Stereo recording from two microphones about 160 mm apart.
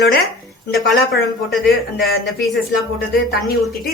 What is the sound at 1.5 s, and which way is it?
Speech, centre (ahead or behind).